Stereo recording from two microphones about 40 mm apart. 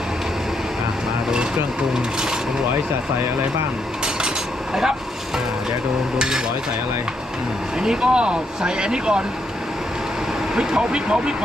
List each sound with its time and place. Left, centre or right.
4.7 s speech: centre
6.1 s cutlery: centre
7.8 s speech: centre
10.5 s speech: centre